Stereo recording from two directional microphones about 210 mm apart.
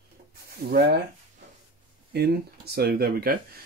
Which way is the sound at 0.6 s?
50° right (ahead or behind).